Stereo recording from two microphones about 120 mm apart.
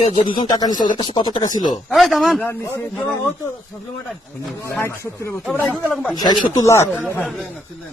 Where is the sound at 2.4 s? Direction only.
20° left (ahead or behind).